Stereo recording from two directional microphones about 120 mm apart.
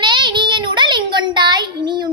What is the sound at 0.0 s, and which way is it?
Child singing, 40° right (ahead or behind).